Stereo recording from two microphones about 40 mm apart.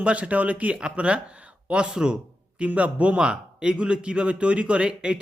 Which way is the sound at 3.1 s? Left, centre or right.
Right.